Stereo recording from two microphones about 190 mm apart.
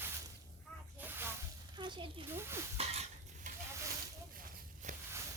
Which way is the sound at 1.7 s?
25° right (ahead or behind).